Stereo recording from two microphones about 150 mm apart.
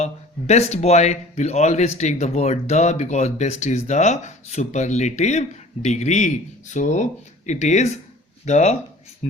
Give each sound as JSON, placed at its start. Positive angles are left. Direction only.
{"t": 0.0, "sound": "speech", "side_deg": 50}